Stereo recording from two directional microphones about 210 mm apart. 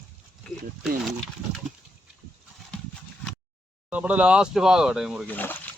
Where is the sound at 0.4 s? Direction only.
Centre (ahead or behind).